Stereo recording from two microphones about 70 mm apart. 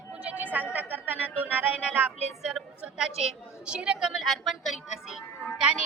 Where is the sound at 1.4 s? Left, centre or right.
Right.